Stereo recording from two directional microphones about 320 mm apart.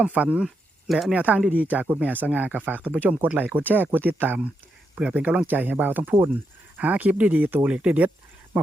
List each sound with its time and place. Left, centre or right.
0.0 s speech: centre